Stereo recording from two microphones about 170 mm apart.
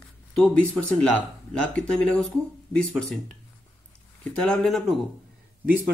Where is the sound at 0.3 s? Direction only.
5° left (ahead or behind).